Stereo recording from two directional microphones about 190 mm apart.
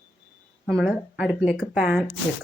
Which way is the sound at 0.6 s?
Centre (ahead or behind).